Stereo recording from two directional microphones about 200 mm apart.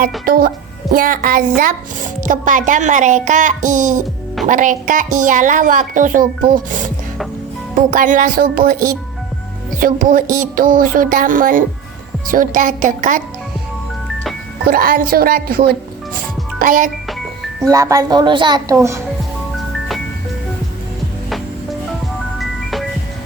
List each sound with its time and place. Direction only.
0.3 s a woman's voice: 50° right (ahead or behind)
14.6 s speech: 45° right (ahead or behind)
17.6 s a child's voice: 15° right (ahead or behind)
21.2 s music: centre (ahead or behind)